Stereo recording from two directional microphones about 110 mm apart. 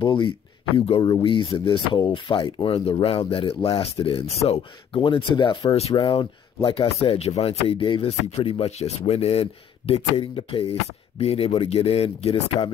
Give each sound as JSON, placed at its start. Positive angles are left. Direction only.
{"t": 0.0, "sound": "speech", "side_deg": 45}
{"t": 0.7, "sound": "speech", "side_deg": 55}
{"t": 1.0, "sound": "speech", "side_deg": 45}
{"t": 5.0, "sound": "speech", "side_deg": 45}
{"t": 5.7, "sound": "speech", "side_deg": 65}
{"t": 5.9, "sound": "speech", "side_deg": 50}